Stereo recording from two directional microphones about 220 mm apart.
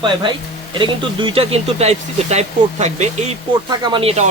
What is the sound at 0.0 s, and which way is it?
Speech, 20° right (ahead or behind).